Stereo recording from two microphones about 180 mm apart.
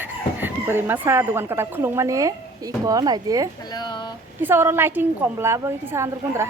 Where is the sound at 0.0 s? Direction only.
10° right (ahead or behind).